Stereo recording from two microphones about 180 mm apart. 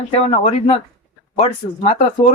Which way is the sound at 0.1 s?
35° left (ahead or behind).